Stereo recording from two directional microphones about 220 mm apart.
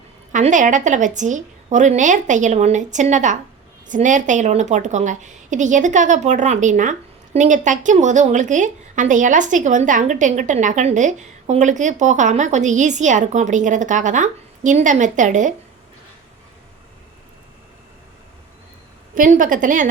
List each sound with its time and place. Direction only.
0.3 s a woman's voice: 35° right (ahead or behind)
19.1 s a woman's voice: 35° right (ahead or behind)